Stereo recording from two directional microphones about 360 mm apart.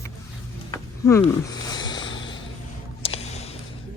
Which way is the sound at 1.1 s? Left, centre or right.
Centre.